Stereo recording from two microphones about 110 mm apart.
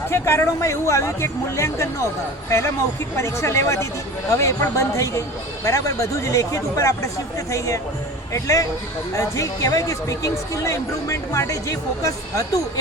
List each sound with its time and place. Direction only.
0.1 s speech: 25° left (ahead or behind)